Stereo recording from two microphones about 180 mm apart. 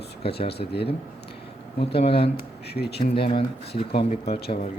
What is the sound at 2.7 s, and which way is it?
Speech, 65° left (ahead or behind).